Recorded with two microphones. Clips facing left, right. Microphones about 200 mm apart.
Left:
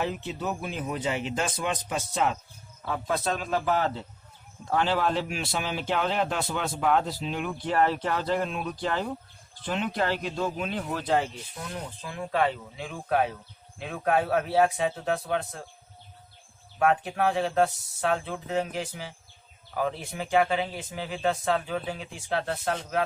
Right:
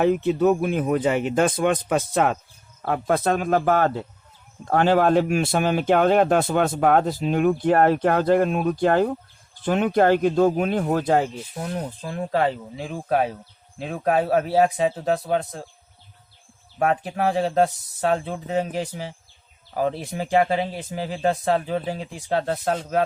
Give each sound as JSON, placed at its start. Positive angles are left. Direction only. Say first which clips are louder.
{"t": 0.0, "sound": "speech", "louder": "right 12 dB", "side_deg": -55}
{"t": 16.7, "sound": "speech", "louder": "right 2 dB", "side_deg": -35}